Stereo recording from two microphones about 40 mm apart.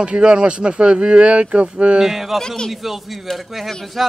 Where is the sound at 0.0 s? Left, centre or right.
Right.